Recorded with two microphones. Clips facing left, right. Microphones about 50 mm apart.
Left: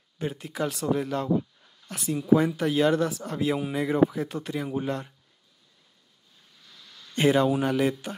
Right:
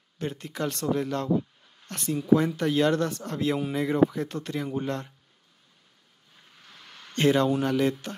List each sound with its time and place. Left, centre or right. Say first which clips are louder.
0.2 s speech: left 1 dB; centre
6.5 s vehicle: right 3 dB; right
7.2 s a man's voice: left 1 dB; centre